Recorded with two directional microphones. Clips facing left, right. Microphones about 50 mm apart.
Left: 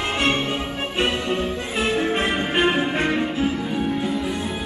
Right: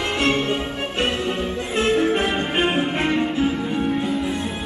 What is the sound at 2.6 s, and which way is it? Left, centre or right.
Music, centre.